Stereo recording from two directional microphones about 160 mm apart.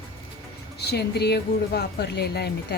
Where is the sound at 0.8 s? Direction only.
90° left.